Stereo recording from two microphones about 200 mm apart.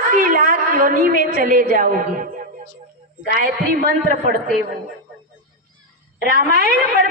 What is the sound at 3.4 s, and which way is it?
Speech, 45° right (ahead or behind).